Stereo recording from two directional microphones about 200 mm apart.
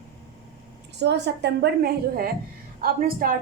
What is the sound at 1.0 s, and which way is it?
A woman's voice, 60° right (ahead or behind).